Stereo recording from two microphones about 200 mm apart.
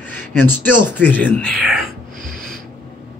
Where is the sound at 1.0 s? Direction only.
5° left (ahead or behind).